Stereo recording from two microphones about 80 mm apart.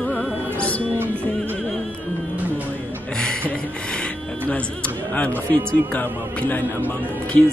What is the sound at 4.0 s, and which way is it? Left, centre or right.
Music, centre.